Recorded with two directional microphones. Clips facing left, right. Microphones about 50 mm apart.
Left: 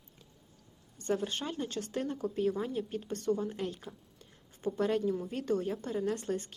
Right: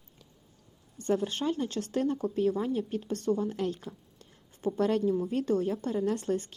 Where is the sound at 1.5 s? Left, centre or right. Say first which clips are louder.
Right 5 dB; right.